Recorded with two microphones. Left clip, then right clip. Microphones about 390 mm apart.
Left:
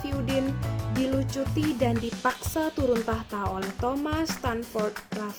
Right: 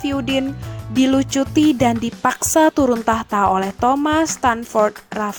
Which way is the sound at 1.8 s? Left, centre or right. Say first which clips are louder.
Right 9 dB; right.